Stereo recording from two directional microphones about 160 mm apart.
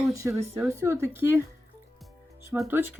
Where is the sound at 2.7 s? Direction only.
15° right (ahead or behind).